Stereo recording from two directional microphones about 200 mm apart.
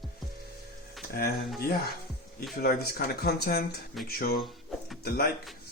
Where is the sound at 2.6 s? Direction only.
50° left (ahead or behind).